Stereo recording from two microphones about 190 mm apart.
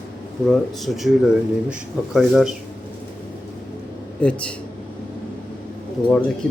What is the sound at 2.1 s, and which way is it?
Speech, centre (ahead or behind).